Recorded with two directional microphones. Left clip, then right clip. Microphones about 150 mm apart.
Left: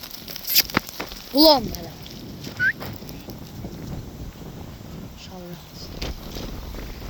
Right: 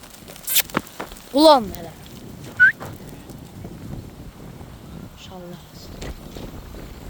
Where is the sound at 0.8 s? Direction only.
Centre (ahead or behind).